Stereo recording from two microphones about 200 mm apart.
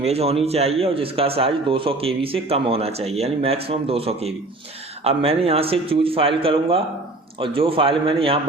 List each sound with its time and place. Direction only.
0.0 s a man's voice: 30° right (ahead or behind)